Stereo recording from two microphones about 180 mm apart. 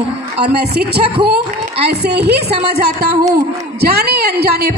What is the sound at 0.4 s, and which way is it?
A woman's voice, 65° right (ahead or behind).